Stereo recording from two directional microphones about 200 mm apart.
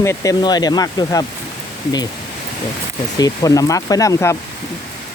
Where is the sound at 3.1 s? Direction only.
20° left (ahead or behind).